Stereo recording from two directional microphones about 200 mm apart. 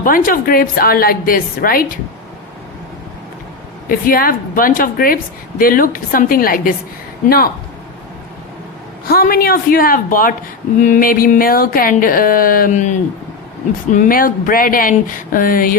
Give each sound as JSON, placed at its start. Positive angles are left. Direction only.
{"t": 0.0, "sound": "a woman's voice", "side_deg": 45}
{"t": 3.8, "sound": "a woman's voice", "side_deg": 45}
{"t": 9.0, "sound": "a woman's voice", "side_deg": 50}
{"t": 13.9, "sound": "a woman's voice", "side_deg": 45}